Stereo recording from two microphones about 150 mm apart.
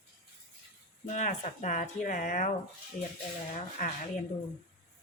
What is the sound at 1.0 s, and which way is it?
Speech, 50° left (ahead or behind).